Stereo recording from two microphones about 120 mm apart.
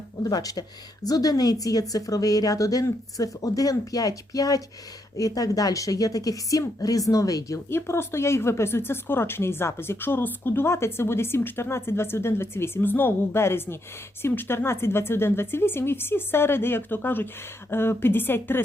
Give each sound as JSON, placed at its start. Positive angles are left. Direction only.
{"t": 0.2, "sound": "a woman's voice", "side_deg": 30}